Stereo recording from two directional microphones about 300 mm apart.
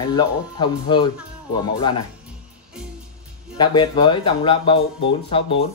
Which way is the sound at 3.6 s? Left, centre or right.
Centre.